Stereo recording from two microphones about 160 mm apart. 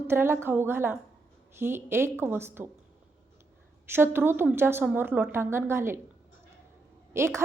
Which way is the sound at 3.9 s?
15° right (ahead or behind).